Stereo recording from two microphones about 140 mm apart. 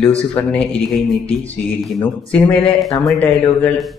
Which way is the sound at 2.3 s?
10° left (ahead or behind).